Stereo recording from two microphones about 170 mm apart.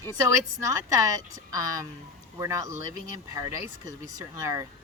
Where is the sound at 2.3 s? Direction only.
15° right (ahead or behind).